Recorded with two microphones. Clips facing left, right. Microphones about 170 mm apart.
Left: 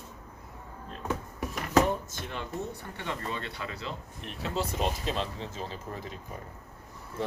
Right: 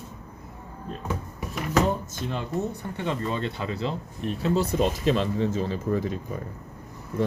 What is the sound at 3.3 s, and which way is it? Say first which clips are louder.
Speech: right 8 dB; 30° right (ahead or behind).